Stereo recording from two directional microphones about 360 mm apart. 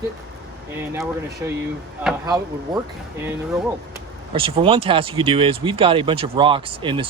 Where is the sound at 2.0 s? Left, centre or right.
Centre.